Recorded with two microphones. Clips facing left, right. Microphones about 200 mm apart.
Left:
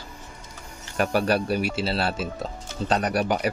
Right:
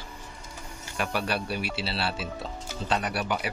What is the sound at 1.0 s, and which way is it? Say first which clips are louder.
Speech: left 7 dB; 45° left (ahead or behind).